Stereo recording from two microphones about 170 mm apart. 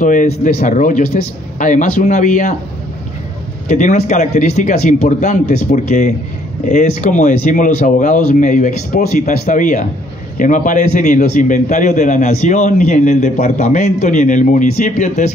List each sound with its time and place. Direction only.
0.0 s a man's voice: 50° left (ahead or behind)
3.6 s a man's voice: 45° left (ahead or behind)